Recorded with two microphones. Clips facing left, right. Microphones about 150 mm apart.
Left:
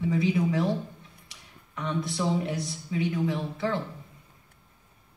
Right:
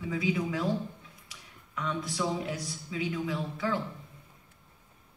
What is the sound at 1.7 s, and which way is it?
Speech, 25° left (ahead or behind).